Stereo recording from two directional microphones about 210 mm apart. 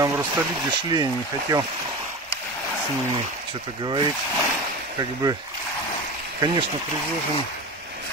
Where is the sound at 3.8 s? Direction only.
20° right (ahead or behind).